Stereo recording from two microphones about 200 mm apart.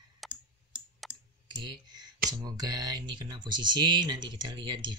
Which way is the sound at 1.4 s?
20° right (ahead or behind).